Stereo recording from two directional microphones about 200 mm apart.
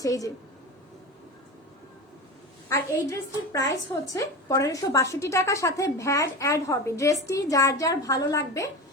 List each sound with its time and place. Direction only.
0.0 s a woman's voice: 15° left (ahead or behind)
2.6 s a woman's voice: 15° left (ahead or behind)